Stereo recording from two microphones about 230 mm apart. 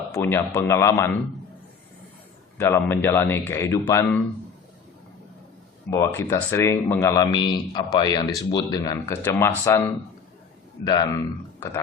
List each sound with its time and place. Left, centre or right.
0.1 s a man's voice: centre
2.6 s a man's voice: centre
5.9 s a man's voice: centre
10.8 s a man's voice: centre